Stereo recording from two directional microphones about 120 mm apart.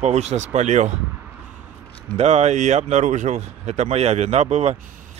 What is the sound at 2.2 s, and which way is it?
Speech, 65° right (ahead or behind).